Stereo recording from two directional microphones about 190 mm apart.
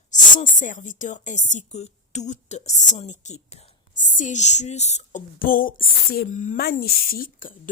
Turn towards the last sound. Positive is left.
turn(degrees=50)  # may be behind; listen again after turning